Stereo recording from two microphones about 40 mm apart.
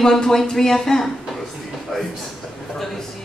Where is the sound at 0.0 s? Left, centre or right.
Centre.